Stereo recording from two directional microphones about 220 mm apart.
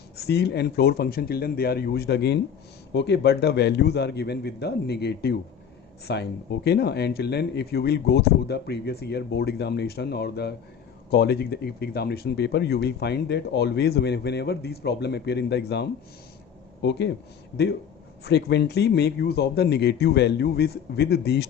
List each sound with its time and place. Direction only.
0.3 s speech: 50° left (ahead or behind)
18.3 s speech: 50° left (ahead or behind)